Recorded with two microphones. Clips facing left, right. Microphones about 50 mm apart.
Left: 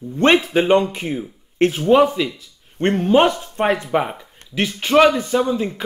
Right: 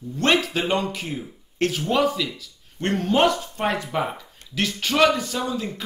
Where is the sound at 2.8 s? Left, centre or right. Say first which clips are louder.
Left 5 dB; centre.